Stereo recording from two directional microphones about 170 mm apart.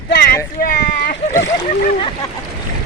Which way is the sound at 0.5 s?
55° left (ahead or behind).